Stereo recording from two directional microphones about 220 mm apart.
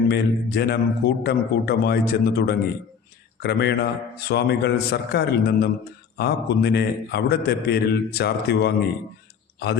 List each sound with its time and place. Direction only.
0.1 s a man's voice: 45° left (ahead or behind)